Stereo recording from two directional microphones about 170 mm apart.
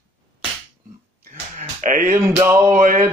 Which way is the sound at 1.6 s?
45° right (ahead or behind).